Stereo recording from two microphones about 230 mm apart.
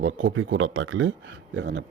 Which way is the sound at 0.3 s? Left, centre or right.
Right.